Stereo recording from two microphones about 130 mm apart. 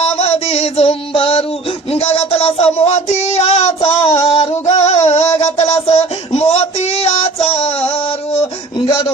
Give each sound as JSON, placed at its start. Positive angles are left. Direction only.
{"t": 0.0, "sound": "music", "side_deg": 50}
{"t": 1.9, "sound": "a sound", "side_deg": 50}
{"t": 3.8, "sound": "female singing", "side_deg": 50}